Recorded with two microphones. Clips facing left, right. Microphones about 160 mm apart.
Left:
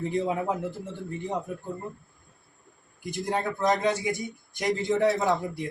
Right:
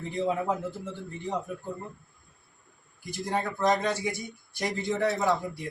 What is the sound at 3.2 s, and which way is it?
A man's voice, 20° left (ahead or behind).